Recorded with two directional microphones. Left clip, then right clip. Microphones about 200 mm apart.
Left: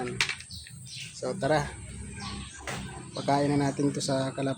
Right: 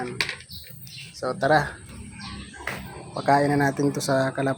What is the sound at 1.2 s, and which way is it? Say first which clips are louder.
Speech: right 6 dB; centre (ahead or behind).